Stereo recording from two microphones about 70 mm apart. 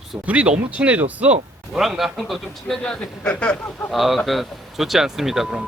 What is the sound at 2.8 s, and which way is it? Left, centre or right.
Speech, centre.